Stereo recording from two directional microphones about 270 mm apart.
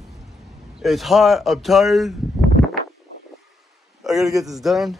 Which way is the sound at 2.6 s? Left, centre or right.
Centre.